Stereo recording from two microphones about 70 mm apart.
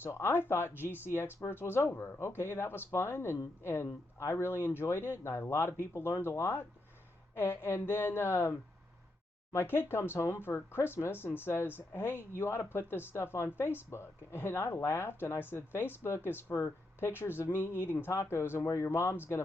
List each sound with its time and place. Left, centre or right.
0.0 s speech: left